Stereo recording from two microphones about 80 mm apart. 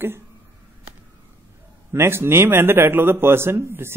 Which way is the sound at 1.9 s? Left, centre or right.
Right.